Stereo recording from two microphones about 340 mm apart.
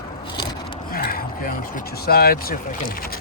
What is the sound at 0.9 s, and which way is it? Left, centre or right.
Speech, left.